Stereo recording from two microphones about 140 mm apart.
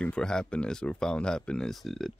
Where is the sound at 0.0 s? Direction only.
5° left (ahead or behind).